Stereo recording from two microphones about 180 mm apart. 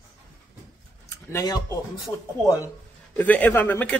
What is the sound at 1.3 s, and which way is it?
Speech, 20° left (ahead or behind).